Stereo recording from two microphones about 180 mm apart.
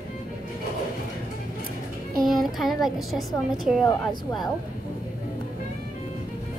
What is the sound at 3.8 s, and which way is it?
Speech, 25° left (ahead or behind).